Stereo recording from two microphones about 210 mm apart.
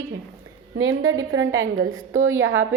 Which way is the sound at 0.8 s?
75° right (ahead or behind).